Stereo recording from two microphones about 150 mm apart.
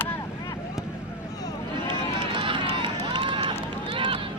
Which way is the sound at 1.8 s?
35° right (ahead or behind).